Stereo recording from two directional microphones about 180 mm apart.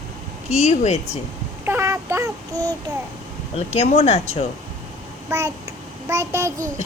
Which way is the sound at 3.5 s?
35° left (ahead or behind).